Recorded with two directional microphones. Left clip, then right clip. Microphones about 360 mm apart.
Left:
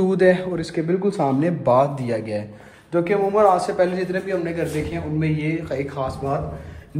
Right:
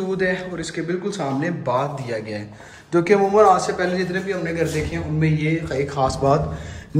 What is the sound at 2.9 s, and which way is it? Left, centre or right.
Speech, centre.